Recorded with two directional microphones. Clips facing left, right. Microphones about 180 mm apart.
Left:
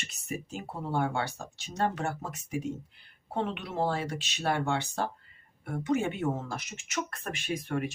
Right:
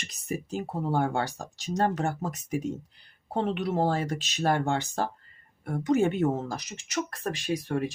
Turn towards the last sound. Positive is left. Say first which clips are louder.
# right 3 dB
turn(degrees=-35)  # may be behind; listen again after turning